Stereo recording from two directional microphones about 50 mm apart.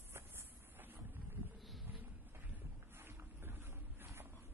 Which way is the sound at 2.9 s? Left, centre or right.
Right.